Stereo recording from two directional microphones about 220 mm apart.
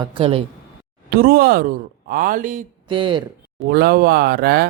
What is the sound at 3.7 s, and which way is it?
Speech, 45° right (ahead or behind).